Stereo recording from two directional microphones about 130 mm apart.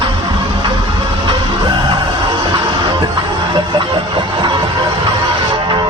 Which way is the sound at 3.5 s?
40° right (ahead or behind).